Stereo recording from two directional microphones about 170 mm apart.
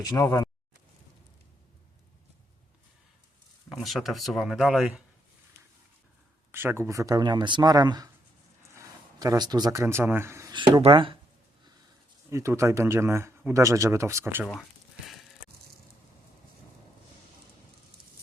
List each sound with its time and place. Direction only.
0.0 s speech: 20° left (ahead or behind)
3.7 s speech: centre (ahead or behind)
6.5 s speech: 15° right (ahead or behind)
9.1 s speech: 20° right (ahead or behind)
10.5 s speech: 30° right (ahead or behind)
12.3 s speech: 15° right (ahead or behind)
14.4 s a sound: centre (ahead or behind)